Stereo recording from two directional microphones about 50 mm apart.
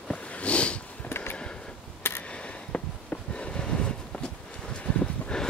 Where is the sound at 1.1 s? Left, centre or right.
Left.